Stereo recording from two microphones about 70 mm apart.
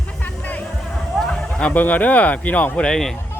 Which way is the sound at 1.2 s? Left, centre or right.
Centre.